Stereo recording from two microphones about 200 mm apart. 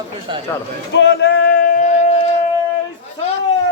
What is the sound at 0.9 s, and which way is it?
Speech, 60° left (ahead or behind).